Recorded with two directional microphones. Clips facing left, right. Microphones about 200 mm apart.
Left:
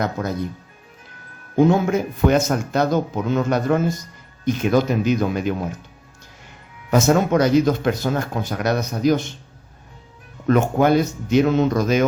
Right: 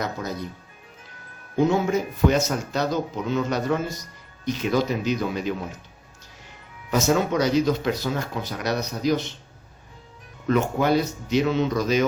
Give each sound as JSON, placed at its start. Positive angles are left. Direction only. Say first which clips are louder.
{"t": 1.5, "sound": "speech", "louder": "left 4 dB", "side_deg": 55}
{"t": 6.9, "sound": "speech", "louder": "left 5 dB", "side_deg": 50}
{"t": 10.4, "sound": "speech", "louder": "left 5 dB", "side_deg": 50}